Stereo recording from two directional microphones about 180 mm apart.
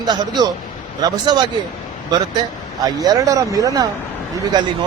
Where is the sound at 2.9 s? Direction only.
20° right (ahead or behind).